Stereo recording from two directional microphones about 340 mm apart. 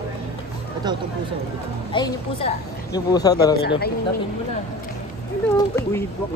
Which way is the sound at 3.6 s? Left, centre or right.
Left.